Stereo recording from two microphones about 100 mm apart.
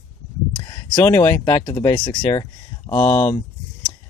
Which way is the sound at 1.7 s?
40° left (ahead or behind).